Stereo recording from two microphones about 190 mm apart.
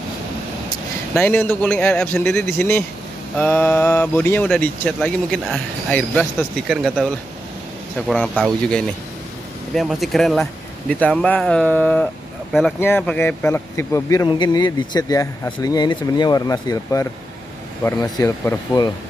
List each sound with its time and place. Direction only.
1.1 s speech: 10° left (ahead or behind)
8.1 s speech: 5° left (ahead or behind)